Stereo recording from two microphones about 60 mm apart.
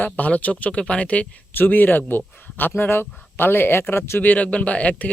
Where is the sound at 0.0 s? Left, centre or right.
Left.